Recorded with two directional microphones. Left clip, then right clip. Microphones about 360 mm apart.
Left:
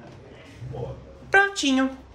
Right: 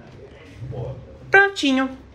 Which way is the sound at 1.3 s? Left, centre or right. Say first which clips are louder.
Right 4 dB; centre.